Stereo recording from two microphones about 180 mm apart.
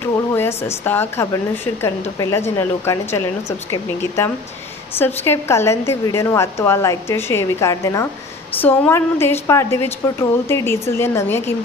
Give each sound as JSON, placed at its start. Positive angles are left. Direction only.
{"t": 0.3, "sound": "a woman's voice", "side_deg": 15}